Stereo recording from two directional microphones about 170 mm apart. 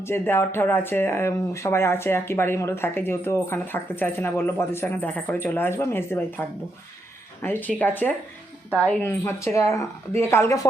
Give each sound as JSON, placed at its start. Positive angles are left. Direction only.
{"t": 0.0, "sound": "speech", "side_deg": 15}
{"t": 7.4, "sound": "speech", "side_deg": 10}